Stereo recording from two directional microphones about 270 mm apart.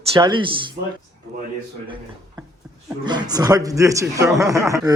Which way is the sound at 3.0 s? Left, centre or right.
Centre.